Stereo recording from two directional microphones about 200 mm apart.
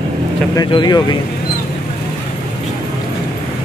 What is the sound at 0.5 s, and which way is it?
Speech, 20° left (ahead or behind).